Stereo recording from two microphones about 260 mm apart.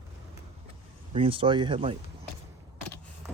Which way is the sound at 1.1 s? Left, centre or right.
Right.